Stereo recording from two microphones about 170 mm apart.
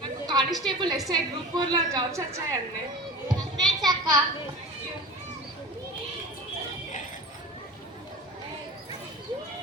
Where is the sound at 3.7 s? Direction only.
25° right (ahead or behind).